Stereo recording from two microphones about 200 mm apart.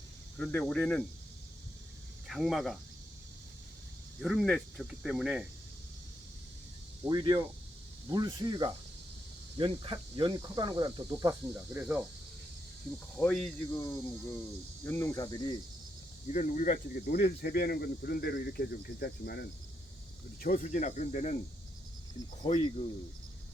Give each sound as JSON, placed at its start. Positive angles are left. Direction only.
{"t": 0.3, "sound": "speech", "side_deg": 10}
{"t": 2.2, "sound": "speech", "side_deg": 0}
{"t": 4.2, "sound": "speech", "side_deg": 0}
{"t": 7.0, "sound": "speech", "side_deg": -15}
{"t": 11.5, "sound": "speech", "side_deg": -5}
{"t": 13.1, "sound": "speech", "side_deg": 5}
{"t": 16.3, "sound": "speech", "side_deg": 40}
{"t": 20.4, "sound": "speech", "side_deg": 40}
{"t": 22.4, "sound": "speech", "side_deg": 30}